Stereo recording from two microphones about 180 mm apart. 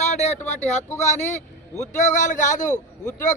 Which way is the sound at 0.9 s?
15° left (ahead or behind).